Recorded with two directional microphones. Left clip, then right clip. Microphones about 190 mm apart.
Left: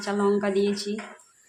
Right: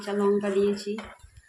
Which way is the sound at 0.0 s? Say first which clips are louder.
Left 1 dB; 15° left (ahead or behind).